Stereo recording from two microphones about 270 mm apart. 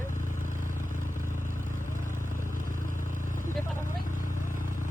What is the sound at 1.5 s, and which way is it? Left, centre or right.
Vehicle, right.